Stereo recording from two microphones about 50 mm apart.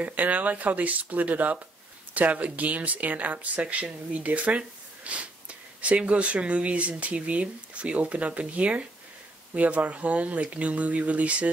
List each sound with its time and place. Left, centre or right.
0.0 s speech: right